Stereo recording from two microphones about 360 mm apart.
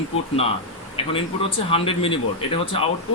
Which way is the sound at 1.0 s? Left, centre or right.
Centre.